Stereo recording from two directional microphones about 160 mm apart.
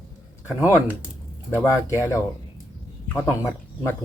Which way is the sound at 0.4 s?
15° left (ahead or behind).